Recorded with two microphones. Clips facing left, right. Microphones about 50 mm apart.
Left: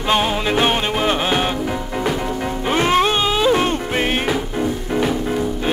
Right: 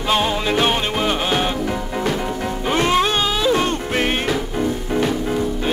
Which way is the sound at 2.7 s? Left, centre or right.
Centre.